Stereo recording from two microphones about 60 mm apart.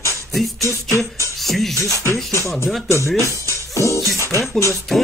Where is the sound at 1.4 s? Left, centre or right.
Centre.